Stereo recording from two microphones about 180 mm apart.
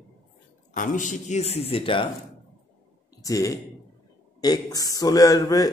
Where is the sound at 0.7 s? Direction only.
45° left (ahead or behind); by 2.1 s 30° left (ahead or behind).